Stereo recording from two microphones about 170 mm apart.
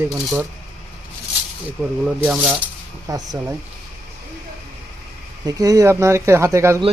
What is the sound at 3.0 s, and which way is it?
Speech, 20° right (ahead or behind).